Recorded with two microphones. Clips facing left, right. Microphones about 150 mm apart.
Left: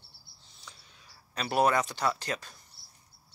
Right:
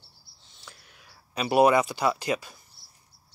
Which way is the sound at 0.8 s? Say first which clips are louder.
Right 3 dB; 75° right (ahead or behind).